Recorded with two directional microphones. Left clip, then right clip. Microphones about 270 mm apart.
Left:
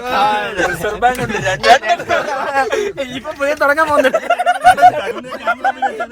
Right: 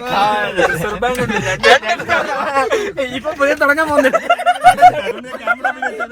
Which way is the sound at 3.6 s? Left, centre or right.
Centre.